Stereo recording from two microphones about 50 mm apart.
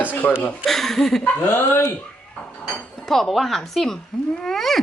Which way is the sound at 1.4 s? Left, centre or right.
Left.